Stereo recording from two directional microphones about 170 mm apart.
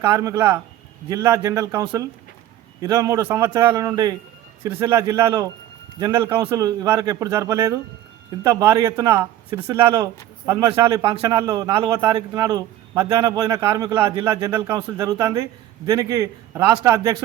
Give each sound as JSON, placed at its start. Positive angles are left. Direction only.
{"t": 0.0, "sound": "a man's voice", "side_deg": -25}
{"t": 9.7, "sound": "a man's voice", "side_deg": -25}